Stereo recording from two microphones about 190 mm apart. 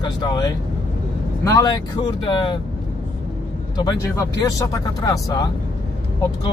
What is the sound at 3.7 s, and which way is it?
Speech, 20° left (ahead or behind).